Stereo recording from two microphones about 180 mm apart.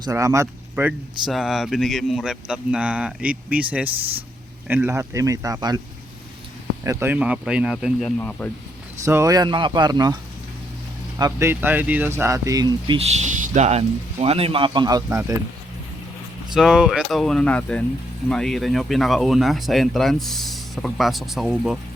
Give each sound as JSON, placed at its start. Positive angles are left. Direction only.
{"t": 0.0, "sound": "speech", "side_deg": -20}
{"t": 1.3, "sound": "speech", "side_deg": 0}
{"t": 6.8, "sound": "speech", "side_deg": -15}
{"t": 8.2, "sound": "speech", "side_deg": 10}
{"t": 9.0, "sound": "speech", "side_deg": -15}
{"t": 11.2, "sound": "speech", "side_deg": -15}
{"t": 13.0, "sound": "speech", "side_deg": -40}
{"t": 16.6, "sound": "speech", "side_deg": -5}